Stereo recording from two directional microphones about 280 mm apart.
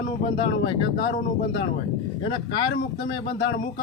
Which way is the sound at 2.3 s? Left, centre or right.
Centre.